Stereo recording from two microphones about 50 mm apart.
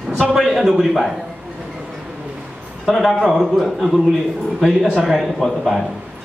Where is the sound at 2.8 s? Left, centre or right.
Centre.